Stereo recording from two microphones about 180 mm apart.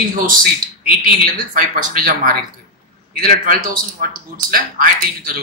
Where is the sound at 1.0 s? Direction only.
50° right (ahead or behind).